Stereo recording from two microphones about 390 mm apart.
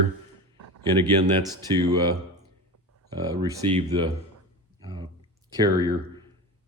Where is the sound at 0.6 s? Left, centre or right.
Right.